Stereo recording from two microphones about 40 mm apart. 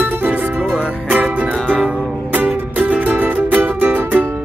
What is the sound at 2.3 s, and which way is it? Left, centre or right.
Music, right.